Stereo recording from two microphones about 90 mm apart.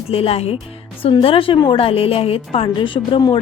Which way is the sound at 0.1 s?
90° left.